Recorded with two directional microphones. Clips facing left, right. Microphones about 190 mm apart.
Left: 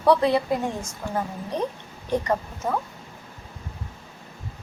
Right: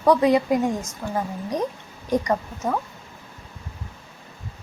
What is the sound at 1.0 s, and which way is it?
Speech, centre (ahead or behind).